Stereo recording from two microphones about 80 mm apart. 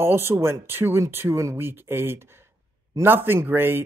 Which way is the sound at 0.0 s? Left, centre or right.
Right.